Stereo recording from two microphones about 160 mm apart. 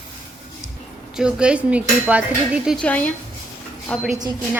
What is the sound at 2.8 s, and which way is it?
A woman's voice, 10° left (ahead or behind).